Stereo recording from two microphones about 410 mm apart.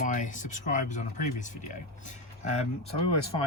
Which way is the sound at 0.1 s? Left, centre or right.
Centre.